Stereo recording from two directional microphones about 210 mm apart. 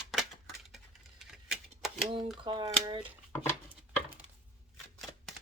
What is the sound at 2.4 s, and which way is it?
Speech, 25° right (ahead or behind).